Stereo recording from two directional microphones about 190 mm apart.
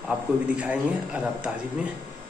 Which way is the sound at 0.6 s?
5° right (ahead or behind).